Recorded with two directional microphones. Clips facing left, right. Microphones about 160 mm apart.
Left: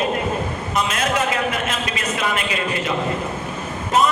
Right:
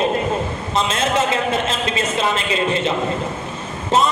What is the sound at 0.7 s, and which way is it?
A man's voice, 25° right (ahead or behind).